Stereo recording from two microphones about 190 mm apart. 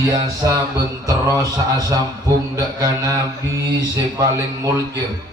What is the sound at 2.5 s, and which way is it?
Mantra, 20° right (ahead or behind).